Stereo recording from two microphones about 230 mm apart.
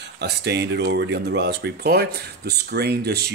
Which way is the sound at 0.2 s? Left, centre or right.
Right.